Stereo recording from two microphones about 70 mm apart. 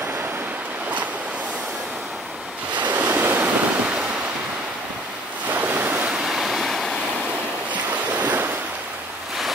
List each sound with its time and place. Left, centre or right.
2.9 s waves: right
5.5 s waves: right
6.0 s waves: centre
7.7 s waves: right